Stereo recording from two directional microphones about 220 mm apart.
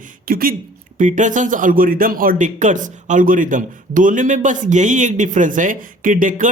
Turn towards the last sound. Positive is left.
turn(degrees=-35)  # may be behind; listen again after turning